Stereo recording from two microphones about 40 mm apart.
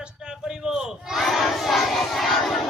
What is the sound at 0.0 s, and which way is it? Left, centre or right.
Battle cry, centre.